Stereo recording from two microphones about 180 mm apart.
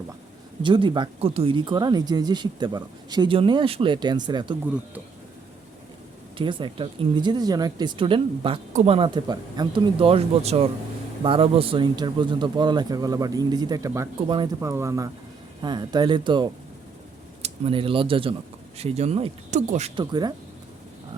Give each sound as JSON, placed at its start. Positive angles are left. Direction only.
{"t": 0.6, "sound": "speech", "side_deg": -25}
{"t": 6.3, "sound": "speech", "side_deg": -25}
{"t": 14.6, "sound": "speech", "side_deg": -15}
{"t": 20.0, "sound": "speech", "side_deg": -20}